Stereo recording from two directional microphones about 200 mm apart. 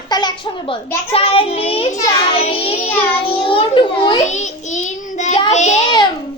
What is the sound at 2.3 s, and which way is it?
Child singing, 30° left (ahead or behind).